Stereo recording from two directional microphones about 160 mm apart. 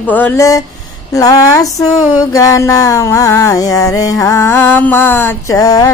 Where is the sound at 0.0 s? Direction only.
10° left (ahead or behind).